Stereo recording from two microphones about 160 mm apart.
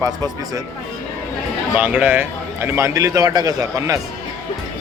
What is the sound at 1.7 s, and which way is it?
A man's voice, 10° right (ahead or behind).